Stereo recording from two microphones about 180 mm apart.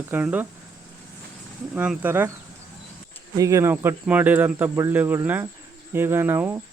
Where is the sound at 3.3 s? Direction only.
20° right (ahead or behind).